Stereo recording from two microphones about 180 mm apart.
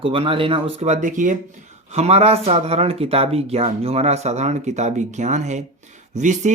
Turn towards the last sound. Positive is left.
turn(degrees=-40)  # may be behind; listen again after turning